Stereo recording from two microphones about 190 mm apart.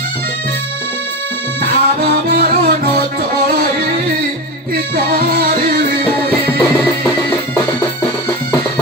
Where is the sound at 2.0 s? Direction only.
55° right (ahead or behind).